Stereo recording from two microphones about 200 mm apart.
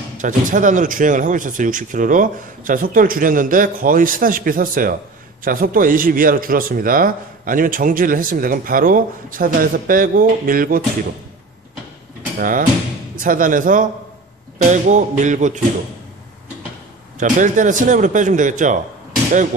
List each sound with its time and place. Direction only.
0.2 s speech: 40° right (ahead or behind)
12.4 s a man's voice: 45° right (ahead or behind)
17.2 s a man's voice: 40° right (ahead or behind)